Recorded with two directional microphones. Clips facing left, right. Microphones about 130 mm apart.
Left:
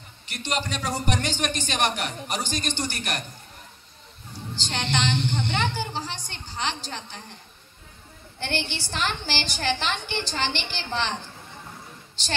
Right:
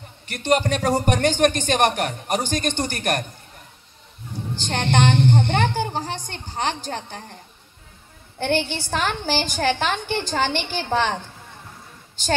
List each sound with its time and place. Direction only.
0.3 s speech: 50° right (ahead or behind)
4.6 s speech: 50° right (ahead or behind)
8.4 s speech: 50° right (ahead or behind)